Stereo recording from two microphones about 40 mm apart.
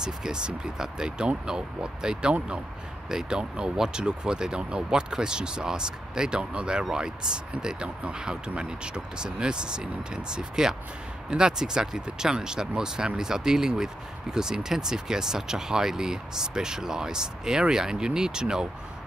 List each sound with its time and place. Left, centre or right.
0.0 s speech: centre